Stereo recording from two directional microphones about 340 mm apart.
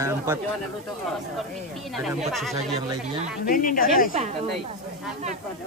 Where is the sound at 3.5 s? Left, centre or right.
Left.